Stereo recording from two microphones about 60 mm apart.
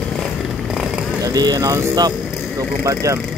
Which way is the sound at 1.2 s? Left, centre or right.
Right.